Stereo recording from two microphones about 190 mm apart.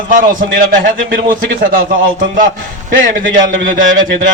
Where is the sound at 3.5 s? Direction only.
45° right (ahead or behind).